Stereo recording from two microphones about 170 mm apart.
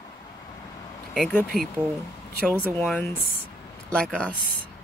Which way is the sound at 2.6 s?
10° left (ahead or behind).